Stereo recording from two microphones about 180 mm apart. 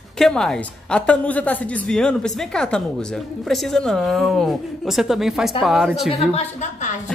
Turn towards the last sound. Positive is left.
turn(degrees=40)  # may be behind; listen again after turning